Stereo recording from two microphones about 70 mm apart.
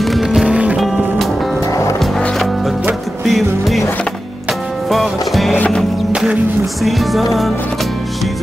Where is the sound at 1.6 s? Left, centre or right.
Left.